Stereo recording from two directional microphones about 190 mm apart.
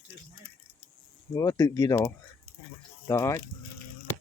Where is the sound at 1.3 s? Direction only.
20° left (ahead or behind).